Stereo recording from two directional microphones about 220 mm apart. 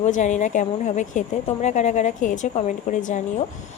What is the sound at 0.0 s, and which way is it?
A woman's voice, 35° left (ahead or behind).